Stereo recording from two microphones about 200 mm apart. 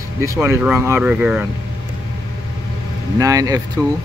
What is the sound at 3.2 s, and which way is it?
Speech, 15° right (ahead or behind).